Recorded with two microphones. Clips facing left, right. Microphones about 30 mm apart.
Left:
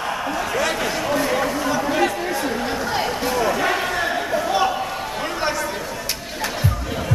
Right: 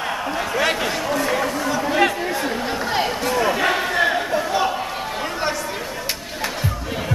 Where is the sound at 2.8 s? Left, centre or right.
Centre.